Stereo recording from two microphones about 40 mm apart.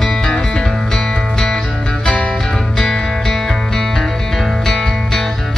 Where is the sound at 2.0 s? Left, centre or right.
Left.